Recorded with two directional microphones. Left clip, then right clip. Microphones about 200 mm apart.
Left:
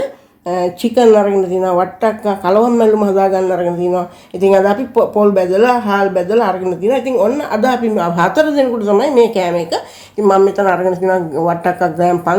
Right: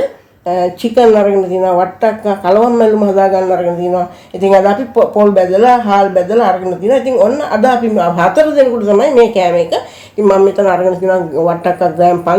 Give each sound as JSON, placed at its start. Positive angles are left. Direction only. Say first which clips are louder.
{"t": 0.4, "sound": "speech", "louder": "right 3 dB", "side_deg": 40}